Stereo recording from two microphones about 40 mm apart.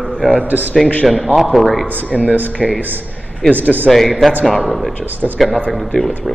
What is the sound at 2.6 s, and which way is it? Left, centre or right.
Speech, centre.